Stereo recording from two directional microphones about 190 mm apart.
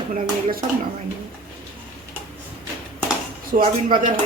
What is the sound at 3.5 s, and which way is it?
Speech, 45° right (ahead or behind).